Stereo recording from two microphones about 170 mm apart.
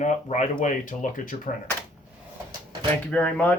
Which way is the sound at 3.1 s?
10° left (ahead or behind).